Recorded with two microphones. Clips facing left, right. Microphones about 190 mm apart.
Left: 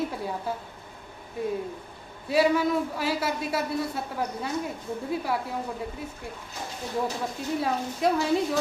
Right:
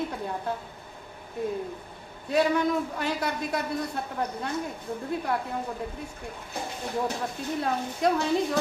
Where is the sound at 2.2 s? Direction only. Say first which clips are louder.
Left 1 dB; 5° left (ahead or behind).